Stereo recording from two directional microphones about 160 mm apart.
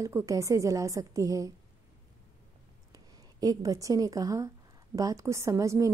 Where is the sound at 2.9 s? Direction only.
25° right (ahead or behind).